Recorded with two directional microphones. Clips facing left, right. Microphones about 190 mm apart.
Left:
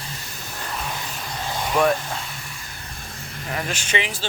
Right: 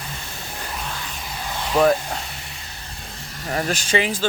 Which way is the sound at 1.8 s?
35° right (ahead or behind).